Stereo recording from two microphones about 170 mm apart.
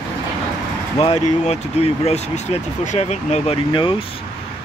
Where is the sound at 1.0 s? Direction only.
35° left (ahead or behind).